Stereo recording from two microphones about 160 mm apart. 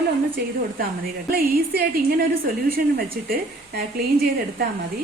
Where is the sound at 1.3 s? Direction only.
70° right (ahead or behind).